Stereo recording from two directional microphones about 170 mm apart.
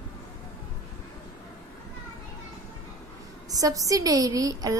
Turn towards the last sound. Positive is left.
turn(degrees=-20)  # may be behind; listen again after turning